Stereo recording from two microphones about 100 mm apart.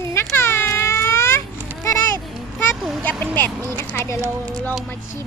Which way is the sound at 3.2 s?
15° left (ahead or behind).